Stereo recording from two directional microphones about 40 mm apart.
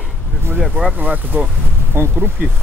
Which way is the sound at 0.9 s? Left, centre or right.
Right.